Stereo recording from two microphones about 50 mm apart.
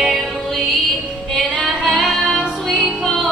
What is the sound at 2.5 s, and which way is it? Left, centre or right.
Music, centre.